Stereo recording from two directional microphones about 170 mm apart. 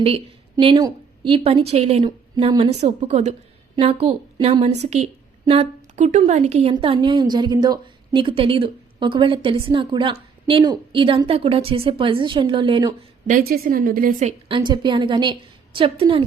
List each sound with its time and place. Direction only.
0.5 s a woman's voice: 25° right (ahead or behind)
13.2 s a woman's voice: 55° right (ahead or behind)
14.3 s a woman's voice: 30° right (ahead or behind)